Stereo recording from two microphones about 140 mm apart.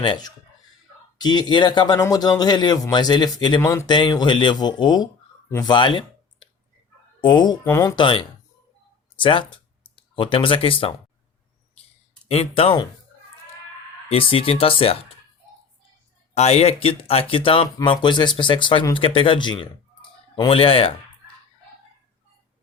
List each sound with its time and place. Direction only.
0.0 s speech: 30° left (ahead or behind)
5.7 s clicking: 35° left (ahead or behind)
7.2 s speech: 30° left (ahead or behind)
7.6 s speech: 20° left (ahead or behind)
7.9 s speech: 40° left (ahead or behind)
12.3 s speech: 45° left (ahead or behind)
14.1 s speech: 40° left (ahead or behind)
16.3 s speech: 50° left (ahead or behind)